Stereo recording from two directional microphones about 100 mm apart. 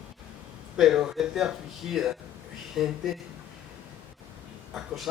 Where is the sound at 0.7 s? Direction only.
5° right (ahead or behind).